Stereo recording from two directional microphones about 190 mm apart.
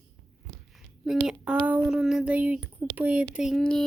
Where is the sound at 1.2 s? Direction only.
5° right (ahead or behind).